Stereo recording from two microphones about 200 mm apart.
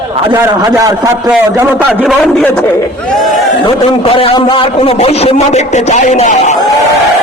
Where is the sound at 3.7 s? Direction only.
25° left (ahead or behind).